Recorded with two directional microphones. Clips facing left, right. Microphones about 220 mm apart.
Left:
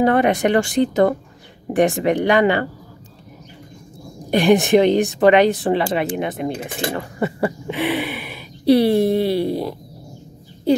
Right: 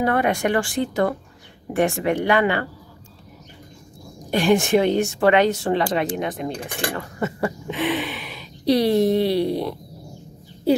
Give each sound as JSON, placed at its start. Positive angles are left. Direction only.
{"t": 0.0, "sound": "speech", "side_deg": 20}
{"t": 4.3, "sound": "speech", "side_deg": 15}
{"t": 6.5, "sound": "speech", "side_deg": 20}